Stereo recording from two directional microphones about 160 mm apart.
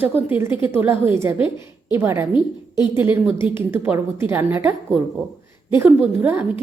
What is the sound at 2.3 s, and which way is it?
Speech, 30° left (ahead or behind).